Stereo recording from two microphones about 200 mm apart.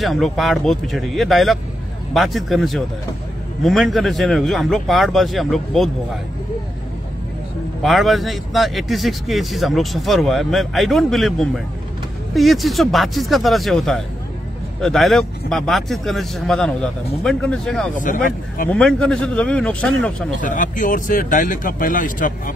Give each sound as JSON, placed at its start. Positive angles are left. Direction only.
{"t": 0.0, "sound": "speech", "side_deg": 0}
{"t": 7.8, "sound": "speech", "side_deg": 0}
{"t": 17.9, "sound": "speech", "side_deg": 40}
{"t": 18.7, "sound": "speech", "side_deg": 5}
{"t": 20.3, "sound": "speech", "side_deg": 40}